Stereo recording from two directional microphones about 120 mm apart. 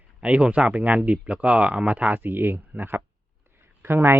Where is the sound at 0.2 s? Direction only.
10° right (ahead or behind).